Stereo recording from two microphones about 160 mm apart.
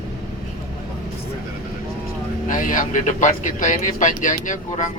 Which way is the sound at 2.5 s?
55° left (ahead or behind).